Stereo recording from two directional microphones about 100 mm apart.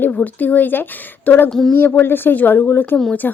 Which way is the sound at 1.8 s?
20° left (ahead or behind).